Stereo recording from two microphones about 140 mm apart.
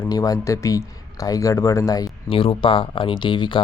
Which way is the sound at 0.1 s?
25° left (ahead or behind).